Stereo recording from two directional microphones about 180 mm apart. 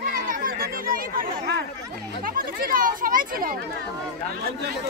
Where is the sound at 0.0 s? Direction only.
50° right (ahead or behind).